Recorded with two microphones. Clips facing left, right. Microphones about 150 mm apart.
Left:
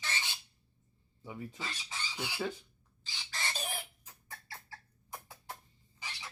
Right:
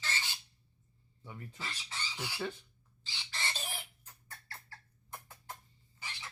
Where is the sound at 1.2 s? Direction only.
10° left (ahead or behind).